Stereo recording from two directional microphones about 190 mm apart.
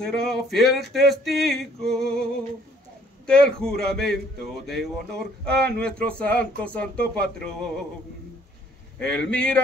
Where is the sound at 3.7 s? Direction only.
55° right (ahead or behind).